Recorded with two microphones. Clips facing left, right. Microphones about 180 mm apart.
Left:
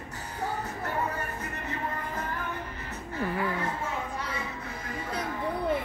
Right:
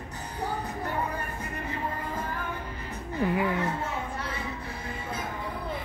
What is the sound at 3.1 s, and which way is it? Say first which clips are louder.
Speech: right 4 dB; 15° right (ahead or behind).